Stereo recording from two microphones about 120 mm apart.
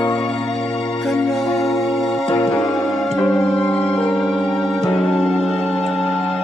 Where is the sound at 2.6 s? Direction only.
30° left (ahead or behind).